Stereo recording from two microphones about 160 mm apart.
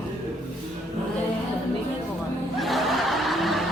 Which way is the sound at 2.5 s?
Centre (ahead or behind).